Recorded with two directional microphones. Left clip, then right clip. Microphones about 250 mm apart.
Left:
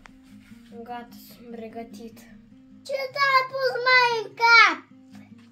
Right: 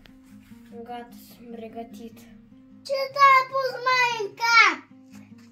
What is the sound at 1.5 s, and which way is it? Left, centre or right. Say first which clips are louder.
Speech: even; centre.